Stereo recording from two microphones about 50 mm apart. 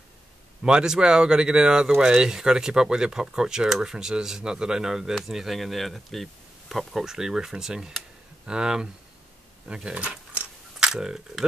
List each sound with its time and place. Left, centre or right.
0.7 s speech: centre
9.8 s keys jangling: right
10.8 s speech: centre